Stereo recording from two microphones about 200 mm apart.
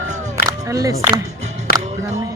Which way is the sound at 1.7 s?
50° left (ahead or behind).